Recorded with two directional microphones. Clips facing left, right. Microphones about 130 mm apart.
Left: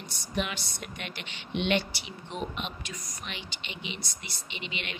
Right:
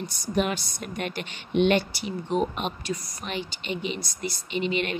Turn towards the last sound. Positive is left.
turn(degrees=-40)  # may be behind; listen again after turning